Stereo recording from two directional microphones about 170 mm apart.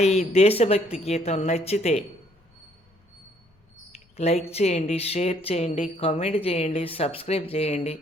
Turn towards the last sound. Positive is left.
turn(degrees=40)  # may be behind; listen again after turning